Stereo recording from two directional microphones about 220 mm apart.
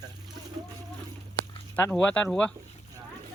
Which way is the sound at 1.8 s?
5° left (ahead or behind).